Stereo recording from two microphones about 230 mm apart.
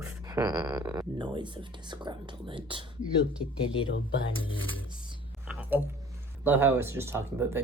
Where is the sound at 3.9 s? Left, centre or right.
Left.